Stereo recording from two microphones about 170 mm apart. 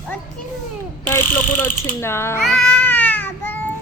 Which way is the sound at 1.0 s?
10° left (ahead or behind).